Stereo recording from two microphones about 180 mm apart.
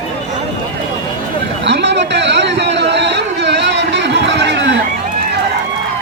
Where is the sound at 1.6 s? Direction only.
75° right (ahead or behind).